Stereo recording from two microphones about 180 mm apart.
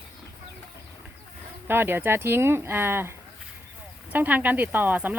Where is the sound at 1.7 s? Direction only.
10° right (ahead or behind).